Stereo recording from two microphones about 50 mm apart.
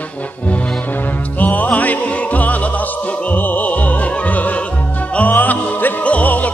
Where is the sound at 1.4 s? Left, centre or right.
Left.